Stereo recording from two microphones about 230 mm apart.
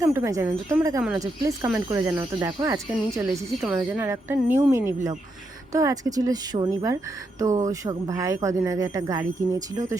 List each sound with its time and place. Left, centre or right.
0.0 s speech: centre